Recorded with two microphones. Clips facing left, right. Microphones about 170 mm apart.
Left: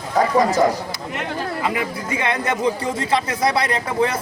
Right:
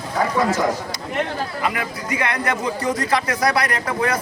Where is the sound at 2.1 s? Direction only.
25° left (ahead or behind).